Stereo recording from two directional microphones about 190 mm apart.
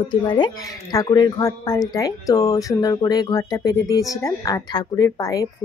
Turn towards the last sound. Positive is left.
turn(degrees=20)  # may be behind; listen again after turning